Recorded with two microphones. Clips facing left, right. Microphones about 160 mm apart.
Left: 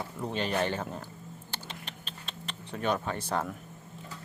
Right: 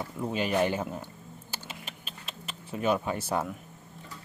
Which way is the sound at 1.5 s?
5° right (ahead or behind).